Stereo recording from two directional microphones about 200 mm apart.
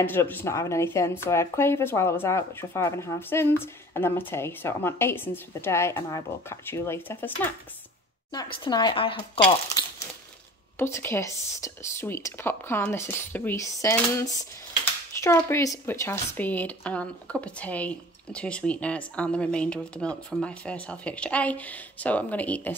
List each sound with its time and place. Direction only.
0.0 s speech: 10° left (ahead or behind)
8.6 s speech: 20° left (ahead or behind)
10.8 s speech: 10° left (ahead or behind)